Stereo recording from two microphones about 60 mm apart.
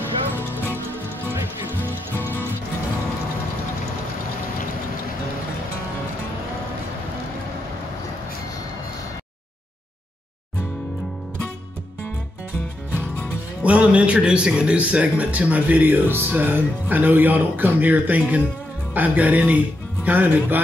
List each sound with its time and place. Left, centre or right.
1.3 s music: right
13.6 s speech: right